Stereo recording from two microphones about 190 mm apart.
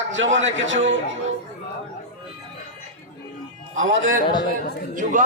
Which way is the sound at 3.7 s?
90° right.